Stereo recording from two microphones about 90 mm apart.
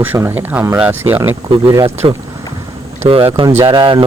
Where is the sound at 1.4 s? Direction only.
75° right (ahead or behind).